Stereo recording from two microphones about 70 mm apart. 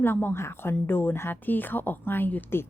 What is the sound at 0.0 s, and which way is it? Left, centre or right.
Speech, left.